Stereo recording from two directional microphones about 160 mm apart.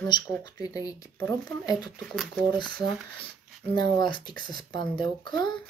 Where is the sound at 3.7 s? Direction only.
25° left (ahead or behind).